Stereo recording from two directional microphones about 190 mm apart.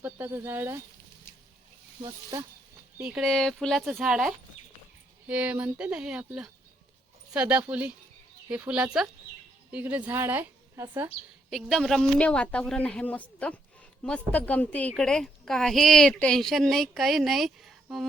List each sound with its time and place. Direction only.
0.0 s speech: 10° right (ahead or behind)
2.0 s speech: 20° right (ahead or behind)
3.0 s a woman's voice: 5° right (ahead or behind)
11.5 s a woman's voice: centre (ahead or behind)